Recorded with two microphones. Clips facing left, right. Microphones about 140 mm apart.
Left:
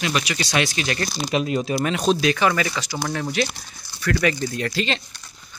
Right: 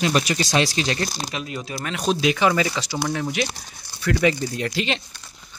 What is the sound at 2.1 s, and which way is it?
A man's voice, 15° right (ahead or behind).